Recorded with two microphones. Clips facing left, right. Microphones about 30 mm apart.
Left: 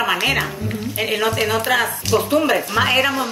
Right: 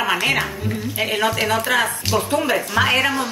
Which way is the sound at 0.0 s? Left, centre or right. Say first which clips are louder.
Left 1 dB; centre.